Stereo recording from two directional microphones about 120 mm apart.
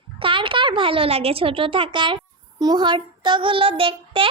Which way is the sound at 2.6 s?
35° right (ahead or behind).